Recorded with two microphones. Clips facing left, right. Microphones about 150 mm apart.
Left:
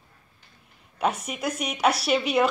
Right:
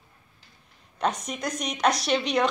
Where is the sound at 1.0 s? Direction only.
5° left (ahead or behind).